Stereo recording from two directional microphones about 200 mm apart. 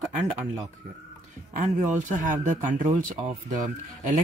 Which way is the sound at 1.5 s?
40° right (ahead or behind).